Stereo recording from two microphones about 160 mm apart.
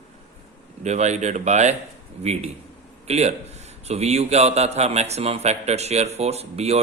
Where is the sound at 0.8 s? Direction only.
45° right (ahead or behind).